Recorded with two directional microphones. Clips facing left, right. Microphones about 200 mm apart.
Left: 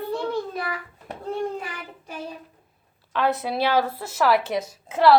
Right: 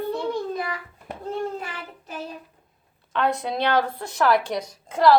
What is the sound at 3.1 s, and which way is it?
A woman's voice, 5° left (ahead or behind).